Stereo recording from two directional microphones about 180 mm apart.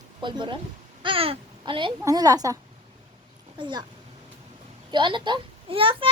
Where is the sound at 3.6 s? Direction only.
25° right (ahead or behind).